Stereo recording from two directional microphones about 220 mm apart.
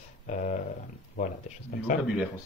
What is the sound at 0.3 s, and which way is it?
Speech, 35° left (ahead or behind).